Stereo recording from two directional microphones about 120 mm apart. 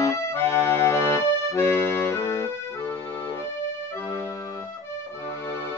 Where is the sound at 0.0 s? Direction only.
25° left (ahead or behind).